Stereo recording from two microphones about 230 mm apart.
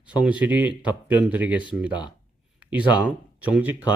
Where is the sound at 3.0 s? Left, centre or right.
Centre.